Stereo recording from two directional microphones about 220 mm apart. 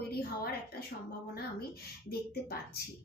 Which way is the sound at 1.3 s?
45° left (ahead or behind).